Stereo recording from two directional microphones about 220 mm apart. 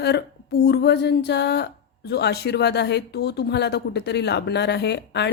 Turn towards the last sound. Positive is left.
turn(degrees=50)  # may be behind; listen again after turning